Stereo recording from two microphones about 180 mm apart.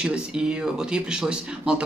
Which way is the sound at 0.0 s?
5° right (ahead or behind).